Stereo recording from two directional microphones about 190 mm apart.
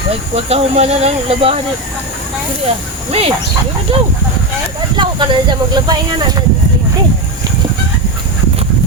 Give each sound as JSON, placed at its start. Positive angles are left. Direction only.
{"t": 0.3, "sound": "speech", "side_deg": -30}
{"t": 3.1, "sound": "speech", "side_deg": -30}